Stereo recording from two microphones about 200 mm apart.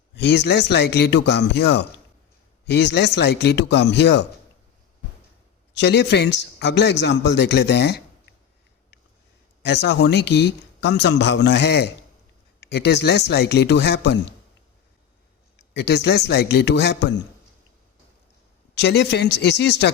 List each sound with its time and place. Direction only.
0.2 s speech: 55° left (ahead or behind)
5.7 s speech: 60° left (ahead or behind)
9.6 s speech: 60° left (ahead or behind)
15.7 s speech: 60° left (ahead or behind)
18.7 s speech: 60° left (ahead or behind)